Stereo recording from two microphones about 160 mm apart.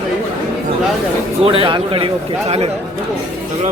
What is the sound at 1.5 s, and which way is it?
Speech, 30° right (ahead or behind).